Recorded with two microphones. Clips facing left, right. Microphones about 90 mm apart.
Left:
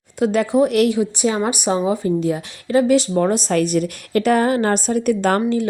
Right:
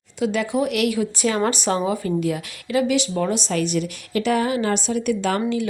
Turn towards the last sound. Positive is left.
turn(degrees=45)  # may be behind; listen again after turning